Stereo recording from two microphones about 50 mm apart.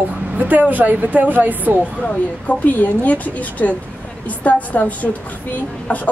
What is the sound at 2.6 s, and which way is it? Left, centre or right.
A woman's voice, left.